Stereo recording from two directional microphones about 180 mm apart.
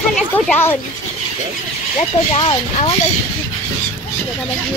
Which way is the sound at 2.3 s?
30° left (ahead or behind).